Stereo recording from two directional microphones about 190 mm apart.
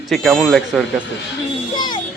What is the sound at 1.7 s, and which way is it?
Music, 20° left (ahead or behind).